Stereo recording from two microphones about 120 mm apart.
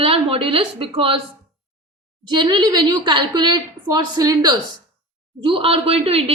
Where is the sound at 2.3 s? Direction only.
40° right (ahead or behind).